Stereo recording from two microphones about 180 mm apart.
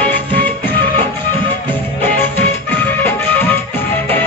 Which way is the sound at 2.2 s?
10° left (ahead or behind).